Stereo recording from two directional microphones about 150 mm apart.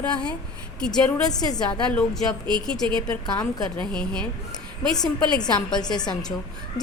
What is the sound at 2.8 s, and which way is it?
Speech, 35° right (ahead or behind).